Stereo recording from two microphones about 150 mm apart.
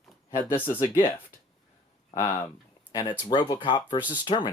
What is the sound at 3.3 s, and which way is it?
Speech, 30° left (ahead or behind).